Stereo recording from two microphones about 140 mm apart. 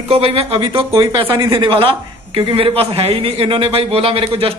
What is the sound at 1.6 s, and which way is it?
A man's voice, 40° right (ahead or behind).